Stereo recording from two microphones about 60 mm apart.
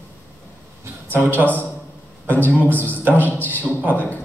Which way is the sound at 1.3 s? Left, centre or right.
Left.